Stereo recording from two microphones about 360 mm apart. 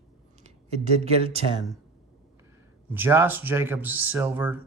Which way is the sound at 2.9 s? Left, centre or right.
Centre.